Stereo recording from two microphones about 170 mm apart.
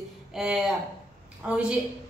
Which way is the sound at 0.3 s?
Centre (ahead or behind).